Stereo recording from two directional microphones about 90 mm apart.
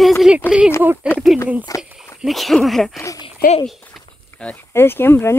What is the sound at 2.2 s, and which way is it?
Speech, centre (ahead or behind).